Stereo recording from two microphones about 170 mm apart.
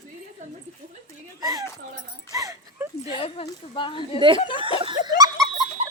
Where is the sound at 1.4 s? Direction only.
20° right (ahead or behind).